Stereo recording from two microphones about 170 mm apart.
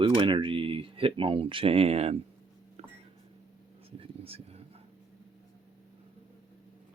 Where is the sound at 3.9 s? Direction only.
35° right (ahead or behind).